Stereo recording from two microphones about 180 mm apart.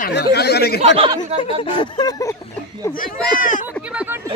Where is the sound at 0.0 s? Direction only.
65° left (ahead or behind).